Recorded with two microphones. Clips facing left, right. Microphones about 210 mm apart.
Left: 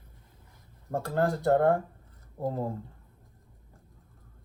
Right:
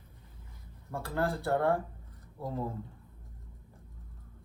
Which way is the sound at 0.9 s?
45° left (ahead or behind).